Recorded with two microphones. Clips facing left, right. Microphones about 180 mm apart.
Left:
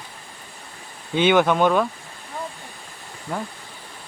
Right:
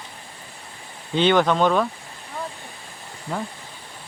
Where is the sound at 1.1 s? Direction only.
10° left (ahead or behind).